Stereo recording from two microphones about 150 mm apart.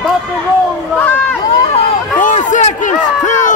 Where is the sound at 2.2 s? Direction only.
55° left (ahead or behind).